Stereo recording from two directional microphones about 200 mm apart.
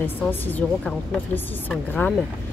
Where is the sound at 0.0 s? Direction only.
10° left (ahead or behind).